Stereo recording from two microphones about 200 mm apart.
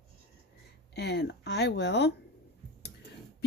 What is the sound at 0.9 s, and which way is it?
Speech, 55° left (ahead or behind).